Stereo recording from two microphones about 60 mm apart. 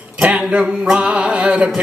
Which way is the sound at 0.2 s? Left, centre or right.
Centre.